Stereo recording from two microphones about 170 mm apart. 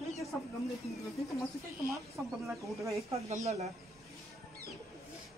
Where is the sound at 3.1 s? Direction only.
40° right (ahead or behind).